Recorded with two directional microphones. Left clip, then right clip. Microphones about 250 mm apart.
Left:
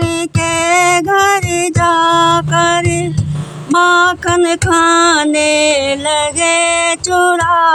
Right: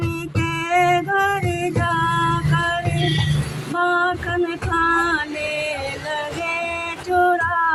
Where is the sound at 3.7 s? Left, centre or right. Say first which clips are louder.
Left 10 dB; left.